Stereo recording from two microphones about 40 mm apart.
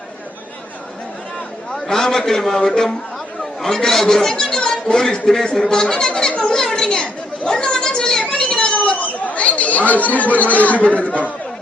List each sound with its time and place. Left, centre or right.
1.7 s a man's voice: centre
6.3 s children playing: left
6.6 s chatter: centre
8.4 s a sound: centre
8.7 s chatter: left